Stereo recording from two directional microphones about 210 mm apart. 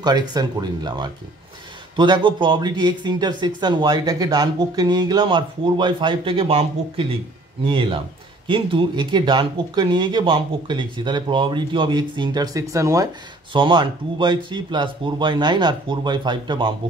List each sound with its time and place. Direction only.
0.0 s speech: 20° right (ahead or behind)